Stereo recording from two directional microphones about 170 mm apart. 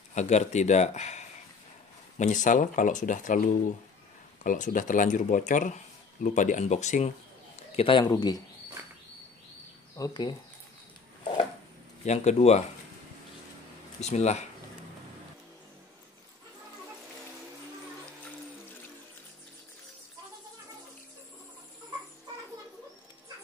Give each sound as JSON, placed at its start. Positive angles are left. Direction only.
{"t": 0.1, "sound": "speech", "side_deg": 45}
{"t": 7.7, "sound": "a man's voice", "side_deg": 30}
{"t": 9.9, "sound": "a man's voice", "side_deg": 25}
{"t": 12.0, "sound": "speech", "side_deg": 40}
{"t": 14.0, "sound": "speech", "side_deg": 40}